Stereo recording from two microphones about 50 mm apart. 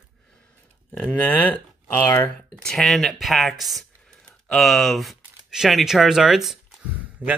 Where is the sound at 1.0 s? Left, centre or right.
Left.